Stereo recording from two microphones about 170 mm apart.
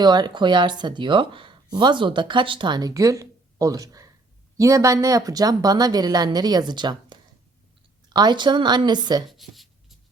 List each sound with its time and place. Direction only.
0.0 s speech: 25° right (ahead or behind)
9.3 s writing: centre (ahead or behind)